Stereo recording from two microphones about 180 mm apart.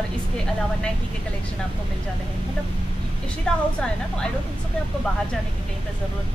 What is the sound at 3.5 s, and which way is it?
Speech, 5° left (ahead or behind).